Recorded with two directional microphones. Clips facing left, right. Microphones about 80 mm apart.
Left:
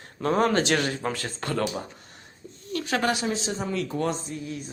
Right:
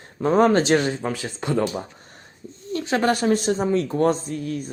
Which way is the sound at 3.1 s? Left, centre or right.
Right.